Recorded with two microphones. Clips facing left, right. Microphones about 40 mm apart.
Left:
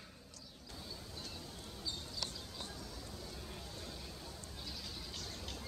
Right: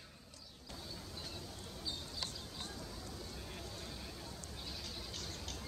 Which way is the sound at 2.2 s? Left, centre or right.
Centre.